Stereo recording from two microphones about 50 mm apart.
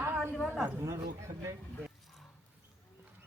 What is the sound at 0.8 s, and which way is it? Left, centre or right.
Speech, right.